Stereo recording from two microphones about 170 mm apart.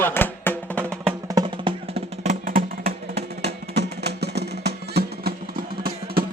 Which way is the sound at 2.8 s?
75° right (ahead or behind).